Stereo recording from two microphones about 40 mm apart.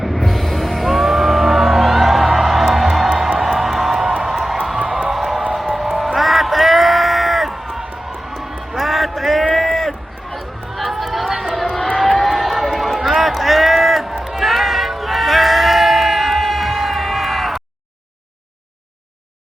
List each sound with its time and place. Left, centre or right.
0.0 s music: centre
4.0 s music: right
4.3 s crowd: centre
4.8 s a sound: right
5.1 s music: centre
6.1 s a sound: centre
9.6 s run: centre
10.3 s chatter: centre
11.9 s run: centre
14.3 s a sound: centre